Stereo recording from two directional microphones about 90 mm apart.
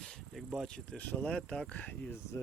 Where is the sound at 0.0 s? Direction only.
Centre (ahead or behind).